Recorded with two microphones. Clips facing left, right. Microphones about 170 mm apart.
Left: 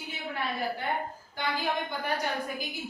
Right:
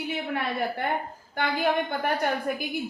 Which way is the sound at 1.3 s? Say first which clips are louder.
Right 6 dB; 60° right (ahead or behind).